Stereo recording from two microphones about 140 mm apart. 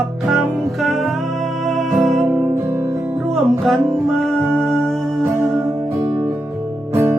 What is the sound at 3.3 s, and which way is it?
Music, centre (ahead or behind).